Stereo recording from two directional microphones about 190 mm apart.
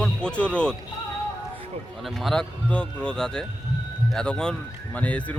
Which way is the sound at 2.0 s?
Centre (ahead or behind).